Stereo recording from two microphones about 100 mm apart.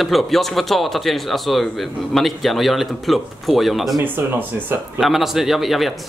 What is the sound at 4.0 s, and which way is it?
Speech, 20° right (ahead or behind).